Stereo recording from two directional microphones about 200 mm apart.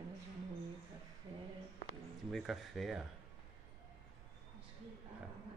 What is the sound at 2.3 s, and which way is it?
Speech, centre (ahead or behind).